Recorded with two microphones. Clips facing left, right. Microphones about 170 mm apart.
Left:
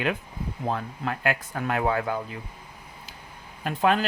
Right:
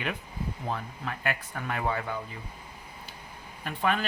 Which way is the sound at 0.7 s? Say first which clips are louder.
Left 6 dB; 65° left (ahead or behind).